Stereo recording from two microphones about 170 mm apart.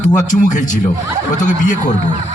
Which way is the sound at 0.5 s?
50° left (ahead or behind).